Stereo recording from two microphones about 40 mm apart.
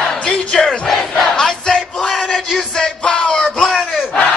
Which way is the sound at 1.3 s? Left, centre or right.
Centre.